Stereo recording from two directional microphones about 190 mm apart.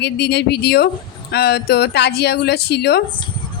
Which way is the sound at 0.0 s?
60° left (ahead or behind).